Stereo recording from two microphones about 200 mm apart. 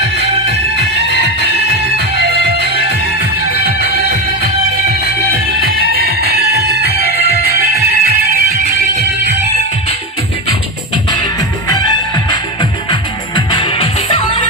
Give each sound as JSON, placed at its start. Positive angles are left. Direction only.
{"t": 1.0, "sound": "music", "side_deg": -55}
{"t": 5.6, "sound": "music", "side_deg": -50}
{"t": 12.9, "sound": "music", "side_deg": 25}